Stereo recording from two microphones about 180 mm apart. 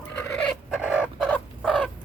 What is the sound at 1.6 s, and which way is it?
Fowl, 5° right (ahead or behind).